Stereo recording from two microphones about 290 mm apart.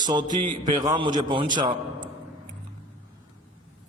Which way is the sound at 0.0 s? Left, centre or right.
Centre.